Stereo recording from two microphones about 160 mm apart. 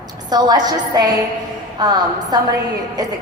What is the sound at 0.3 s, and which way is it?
A woman's voice, 25° right (ahead or behind).